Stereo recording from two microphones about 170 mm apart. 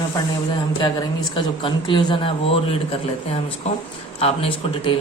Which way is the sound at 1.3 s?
25° left (ahead or behind).